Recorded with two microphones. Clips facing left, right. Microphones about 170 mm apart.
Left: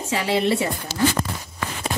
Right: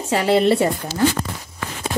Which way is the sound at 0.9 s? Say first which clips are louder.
Even; 75° left (ahead or behind).